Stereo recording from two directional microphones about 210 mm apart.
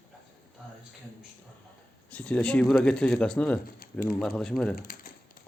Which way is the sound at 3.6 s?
45° left (ahead or behind).